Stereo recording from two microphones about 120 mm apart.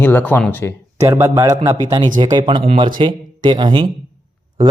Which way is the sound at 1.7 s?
35° right (ahead or behind).